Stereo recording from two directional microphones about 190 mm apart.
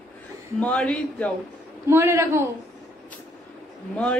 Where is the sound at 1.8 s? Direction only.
15° right (ahead or behind).